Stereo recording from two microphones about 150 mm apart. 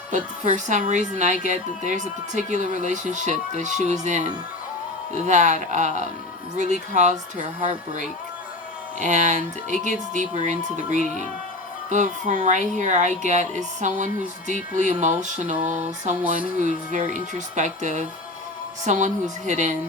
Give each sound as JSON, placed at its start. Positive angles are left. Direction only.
{"t": 0.1, "sound": "speech", "side_deg": -55}
{"t": 9.0, "sound": "speech", "side_deg": -55}
{"t": 11.9, "sound": "speech", "side_deg": -55}